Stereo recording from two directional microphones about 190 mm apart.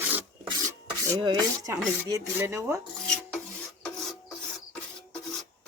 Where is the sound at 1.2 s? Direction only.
20° right (ahead or behind).